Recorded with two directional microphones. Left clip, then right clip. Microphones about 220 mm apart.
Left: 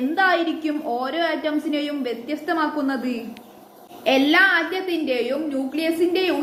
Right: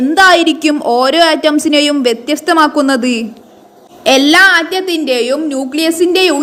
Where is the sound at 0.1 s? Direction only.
50° right (ahead or behind).